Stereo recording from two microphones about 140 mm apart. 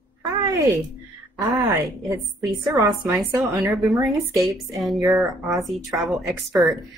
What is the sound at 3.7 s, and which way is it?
Speech, centre (ahead or behind).